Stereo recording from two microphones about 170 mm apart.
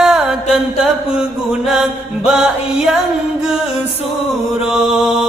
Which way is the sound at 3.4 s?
5° right (ahead or behind).